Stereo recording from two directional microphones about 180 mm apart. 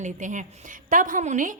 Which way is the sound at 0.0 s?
45° right (ahead or behind).